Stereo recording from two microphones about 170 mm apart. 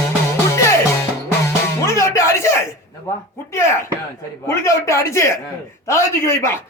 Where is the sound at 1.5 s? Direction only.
15° left (ahead or behind).